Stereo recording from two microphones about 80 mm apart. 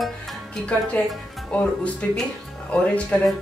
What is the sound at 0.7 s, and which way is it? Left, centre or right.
Speech, centre.